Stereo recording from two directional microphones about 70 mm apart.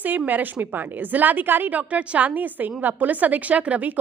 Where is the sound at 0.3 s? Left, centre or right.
Right.